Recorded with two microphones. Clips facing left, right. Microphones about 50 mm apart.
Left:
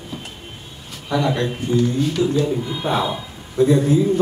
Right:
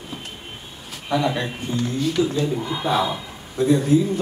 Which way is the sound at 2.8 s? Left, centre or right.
Left.